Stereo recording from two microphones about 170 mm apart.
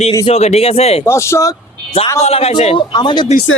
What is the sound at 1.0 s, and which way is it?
Speech, 15° left (ahead or behind).